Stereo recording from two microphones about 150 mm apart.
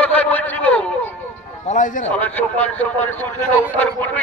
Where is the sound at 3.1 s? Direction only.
15° left (ahead or behind).